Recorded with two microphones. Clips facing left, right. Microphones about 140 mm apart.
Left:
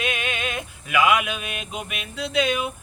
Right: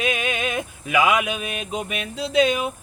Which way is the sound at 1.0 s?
40° right (ahead or behind).